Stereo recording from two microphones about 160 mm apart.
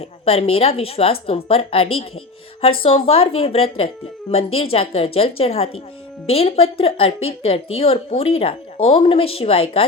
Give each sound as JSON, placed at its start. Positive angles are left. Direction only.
{"t": 0.0, "sound": "a woman's voice", "side_deg": 40}